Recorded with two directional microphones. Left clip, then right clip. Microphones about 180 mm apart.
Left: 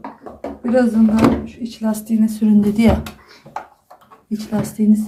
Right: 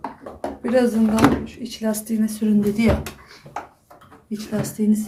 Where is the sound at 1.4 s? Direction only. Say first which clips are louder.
Left 2 dB; 5° right (ahead or behind).